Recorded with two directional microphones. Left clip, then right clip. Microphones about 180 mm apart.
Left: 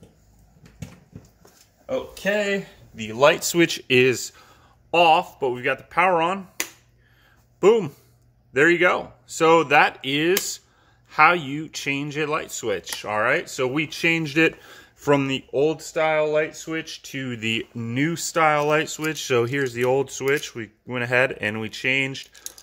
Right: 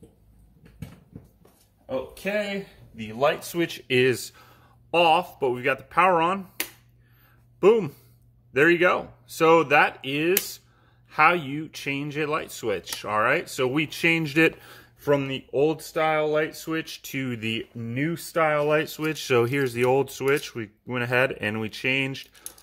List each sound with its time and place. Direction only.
3.0 s a man's voice: 65° left (ahead or behind)
3.5 s speech: 35° left (ahead or behind)
3.8 s speech: 20° left (ahead or behind)
4.1 s speech: centre (ahead or behind)
7.6 s speech: centre (ahead or behind)
15.0 s speech: 20° left (ahead or behind)
15.5 s speech: 10° right (ahead or behind)
17.7 s speech: 20° left (ahead or behind); by 22.6 s 5° right (ahead or behind)